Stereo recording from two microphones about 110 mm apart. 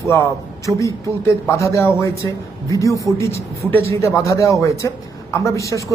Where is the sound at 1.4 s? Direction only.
25° left (ahead or behind).